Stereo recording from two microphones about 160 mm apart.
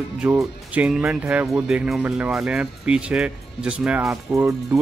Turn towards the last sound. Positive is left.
turn(degrees=-20)  # may be behind; listen again after turning